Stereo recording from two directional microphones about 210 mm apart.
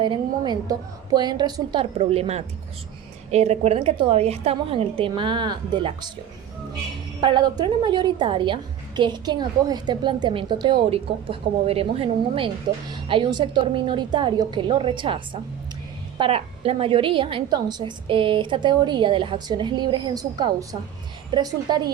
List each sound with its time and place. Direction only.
0.0 s a woman's voice: 20° right (ahead or behind)
7.2 s a woman's voice: 20° right (ahead or behind)